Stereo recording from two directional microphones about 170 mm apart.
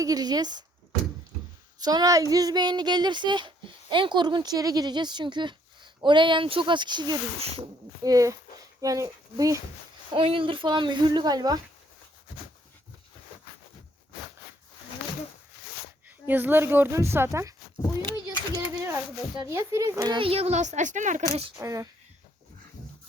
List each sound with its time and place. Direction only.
0.0 s speech: 20° right (ahead or behind)
1.8 s speech: 25° right (ahead or behind)
10.1 s speech: 30° right (ahead or behind)
16.0 s speech: 10° right (ahead or behind)
18.3 s a sound: 20° right (ahead or behind)
19.5 s speech: 15° right (ahead or behind)
20.1 s speech: 35° right (ahead or behind)
21.6 s speech: 20° right (ahead or behind)